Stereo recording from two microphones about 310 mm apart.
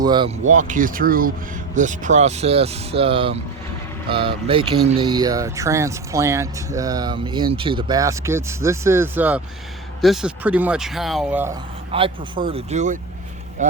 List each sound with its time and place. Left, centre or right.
0.0 s speech: centre
11.9 s speech: centre